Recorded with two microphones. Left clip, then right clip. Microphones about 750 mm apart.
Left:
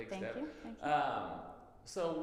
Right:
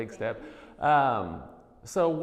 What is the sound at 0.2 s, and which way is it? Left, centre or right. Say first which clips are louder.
Speech: right 9 dB; right.